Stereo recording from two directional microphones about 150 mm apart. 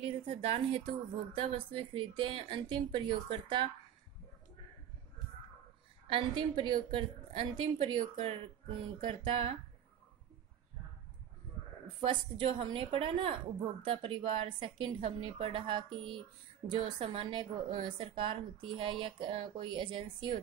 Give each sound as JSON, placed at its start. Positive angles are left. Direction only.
{"t": 0.0, "sound": "a woman's voice", "side_deg": -40}
{"t": 6.0, "sound": "a woman's voice", "side_deg": -35}
{"t": 12.0, "sound": "a woman's voice", "side_deg": -35}